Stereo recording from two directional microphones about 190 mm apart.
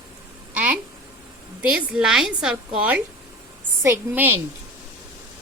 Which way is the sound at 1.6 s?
5° right (ahead or behind).